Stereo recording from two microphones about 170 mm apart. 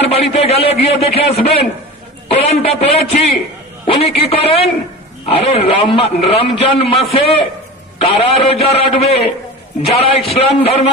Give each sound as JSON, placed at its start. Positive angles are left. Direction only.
{"t": 0.0, "sound": "a man's voice", "side_deg": 35}